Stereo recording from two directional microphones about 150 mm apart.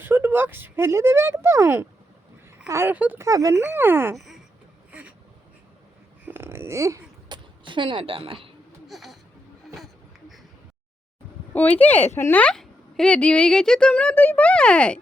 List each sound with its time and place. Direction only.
0.0 s speech: 15° right (ahead or behind)
3.2 s speech: 20° right (ahead or behind)
4.9 s vehicle: 10° right (ahead or behind)
6.2 s a sound: 15° right (ahead or behind)
7.6 s a woman's voice: 35° right (ahead or behind)
8.9 s a sound: centre (ahead or behind)
11.5 s speech: 10° left (ahead or behind)